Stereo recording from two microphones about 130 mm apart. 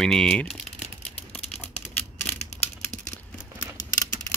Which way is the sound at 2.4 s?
65° left (ahead or behind).